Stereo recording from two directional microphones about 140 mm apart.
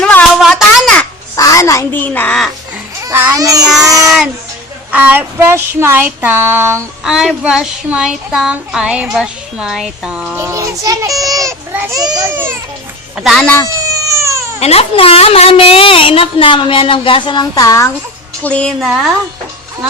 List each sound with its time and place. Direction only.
0.0 s a sound: 10° left (ahead or behind)
1.4 s a woman's voice: 25° left (ahead or behind); by 2.5 s 10° left (ahead or behind)
3.0 s baby cry: 15° right (ahead or behind)
3.3 s a child's voice: 25° right (ahead or behind)
3.8 s child singing: 25° right (ahead or behind)
4.9 s a sound: 10° right (ahead or behind)
7.0 s speech: 5° right (ahead or behind)
10.3 s a child's voice: 20° right (ahead or behind)
12.3 s a sound: 15° right (ahead or behind)
13.1 s speech: centre (ahead or behind)
13.7 s baby cry: 25° right (ahead or behind)
14.6 s a woman's voice: 45° left (ahead or behind); by 17.8 s 25° left (ahead or behind)
18.4 s a woman's voice: 10° left (ahead or behind)